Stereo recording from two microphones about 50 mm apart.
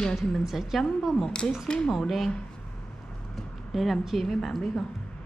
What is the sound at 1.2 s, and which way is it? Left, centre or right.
Speech, centre.